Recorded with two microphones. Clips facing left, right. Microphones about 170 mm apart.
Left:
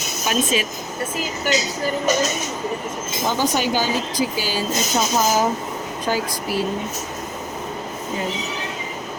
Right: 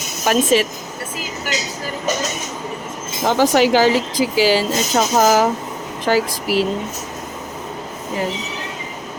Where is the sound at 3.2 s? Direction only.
90° right.